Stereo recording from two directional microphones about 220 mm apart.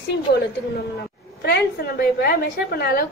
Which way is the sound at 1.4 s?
45° left (ahead or behind).